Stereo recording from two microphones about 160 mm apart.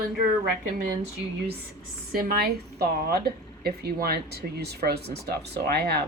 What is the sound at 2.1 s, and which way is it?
Speech, 70° right (ahead or behind).